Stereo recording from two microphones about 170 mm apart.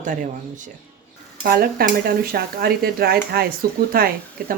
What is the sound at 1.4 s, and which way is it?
Speech, 65° right (ahead or behind).